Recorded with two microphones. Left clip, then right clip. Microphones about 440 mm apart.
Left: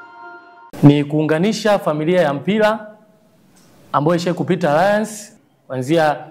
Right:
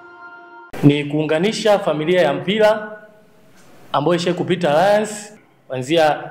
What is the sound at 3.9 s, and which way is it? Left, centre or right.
A man's voice, left.